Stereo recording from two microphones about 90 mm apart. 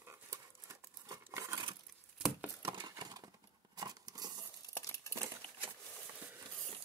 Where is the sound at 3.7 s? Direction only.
50° right (ahead or behind).